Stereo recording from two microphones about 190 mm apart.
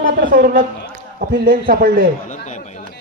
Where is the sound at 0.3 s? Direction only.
50° right (ahead or behind).